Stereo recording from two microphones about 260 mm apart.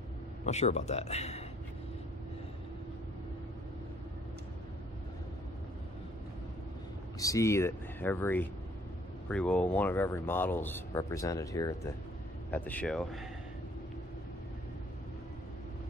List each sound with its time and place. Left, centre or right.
0.5 s speech: left
7.2 s speech: centre